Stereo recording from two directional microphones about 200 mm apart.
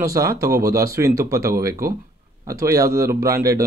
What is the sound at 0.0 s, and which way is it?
Speech, 15° right (ahead or behind).